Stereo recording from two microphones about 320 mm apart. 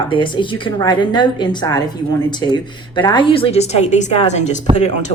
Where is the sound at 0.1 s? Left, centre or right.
Centre.